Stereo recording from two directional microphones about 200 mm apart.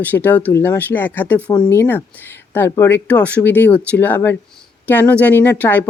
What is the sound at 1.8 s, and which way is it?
Speech, 10° left (ahead or behind).